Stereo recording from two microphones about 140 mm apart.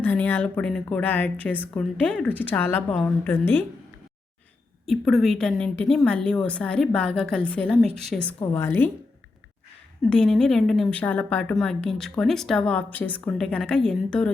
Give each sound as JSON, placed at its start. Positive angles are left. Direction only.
{"t": 0.0, "sound": "a woman's voice", "side_deg": 10}
{"t": 4.9, "sound": "a woman's voice", "side_deg": 0}
{"t": 8.5, "sound": "a woman's voice", "side_deg": 15}
{"t": 10.1, "sound": "a woman's voice", "side_deg": 5}